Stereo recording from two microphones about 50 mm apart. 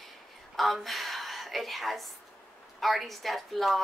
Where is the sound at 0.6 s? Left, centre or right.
Centre.